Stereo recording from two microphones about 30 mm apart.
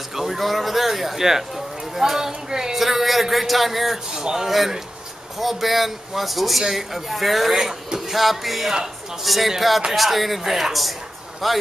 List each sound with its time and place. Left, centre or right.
0.1 s a sound: centre
0.4 s speech: centre
2.7 s speech: centre
4.1 s speech: right
5.4 s speech: centre